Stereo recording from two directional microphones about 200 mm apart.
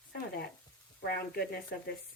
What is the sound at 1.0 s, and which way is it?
Speech, 50° left (ahead or behind).